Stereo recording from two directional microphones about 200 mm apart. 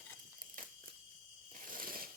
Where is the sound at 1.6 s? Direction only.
45° right (ahead or behind).